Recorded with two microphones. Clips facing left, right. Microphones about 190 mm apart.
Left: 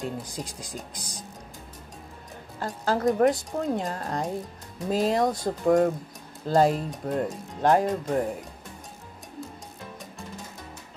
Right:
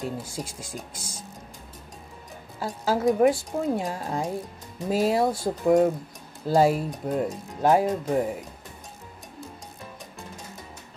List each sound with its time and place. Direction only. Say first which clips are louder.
0.5 s speech: even; 15° left (ahead or behind)
2.6 s a woman's voice: right 1 dB; 5° right (ahead or behind)